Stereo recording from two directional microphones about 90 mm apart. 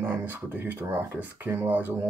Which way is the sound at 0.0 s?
25° right (ahead or behind).